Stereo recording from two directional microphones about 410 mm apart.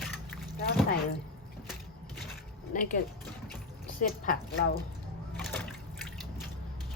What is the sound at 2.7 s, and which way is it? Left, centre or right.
A woman's voice, centre.